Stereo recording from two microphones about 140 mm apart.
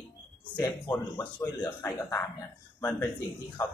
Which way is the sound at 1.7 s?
15° left (ahead or behind).